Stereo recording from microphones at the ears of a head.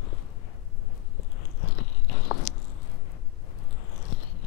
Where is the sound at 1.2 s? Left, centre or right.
Left.